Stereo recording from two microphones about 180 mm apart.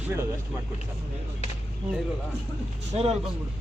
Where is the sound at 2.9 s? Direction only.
40° right (ahead or behind).